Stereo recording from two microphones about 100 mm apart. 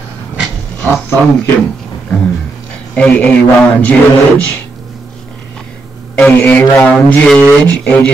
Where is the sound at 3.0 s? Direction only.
10° left (ahead or behind).